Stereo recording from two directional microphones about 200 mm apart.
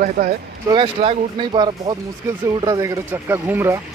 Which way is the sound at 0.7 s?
30° right (ahead or behind).